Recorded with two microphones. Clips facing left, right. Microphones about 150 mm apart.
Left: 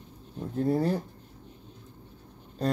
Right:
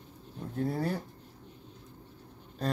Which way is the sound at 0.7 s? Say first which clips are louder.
Left 7 dB; 20° left (ahead or behind).